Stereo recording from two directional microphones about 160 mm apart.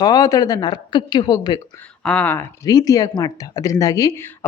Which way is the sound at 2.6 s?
25° left (ahead or behind).